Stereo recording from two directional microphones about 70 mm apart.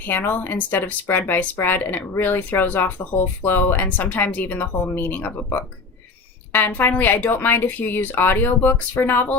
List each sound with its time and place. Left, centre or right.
0.0 s speech: left